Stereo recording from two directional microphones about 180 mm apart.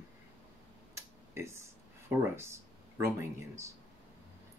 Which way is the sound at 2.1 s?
15° right (ahead or behind).